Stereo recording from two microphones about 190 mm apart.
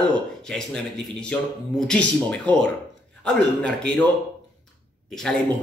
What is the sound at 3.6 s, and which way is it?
Speech, 5° left (ahead or behind).